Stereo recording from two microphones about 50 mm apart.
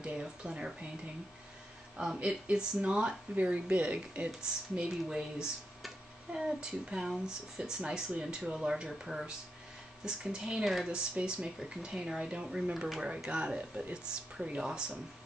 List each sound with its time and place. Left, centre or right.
0.2 s speech: centre
2.2 s speech: centre
4.8 s speech: centre
10.6 s speech: centre
10.9 s speech: centre